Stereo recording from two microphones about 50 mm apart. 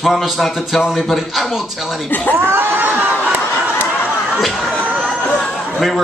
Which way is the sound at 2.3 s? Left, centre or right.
Right.